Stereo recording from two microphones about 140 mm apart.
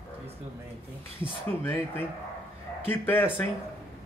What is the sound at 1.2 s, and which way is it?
Speech, 15° left (ahead or behind).